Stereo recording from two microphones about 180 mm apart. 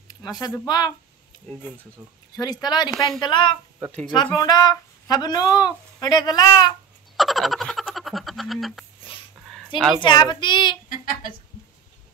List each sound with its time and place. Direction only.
0.1 s a sound: 20° left (ahead or behind)
0.7 s speech: 25° left (ahead or behind)
2.3 s speech: 20° left (ahead or behind)
7.2 s frog: centre (ahead or behind)
9.9 s speech: 25° left (ahead or behind)
10.9 s speech: 50° left (ahead or behind)